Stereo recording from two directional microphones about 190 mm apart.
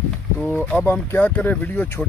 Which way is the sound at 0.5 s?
10° left (ahead or behind).